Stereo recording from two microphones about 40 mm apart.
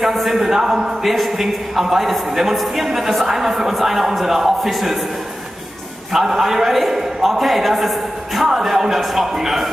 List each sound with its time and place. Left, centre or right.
0.0 s speech: centre
1.0 s a man's voice: centre
6.1 s a man's voice: centre